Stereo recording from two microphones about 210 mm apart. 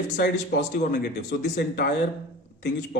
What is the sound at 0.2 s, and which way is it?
Speech, 50° left (ahead or behind).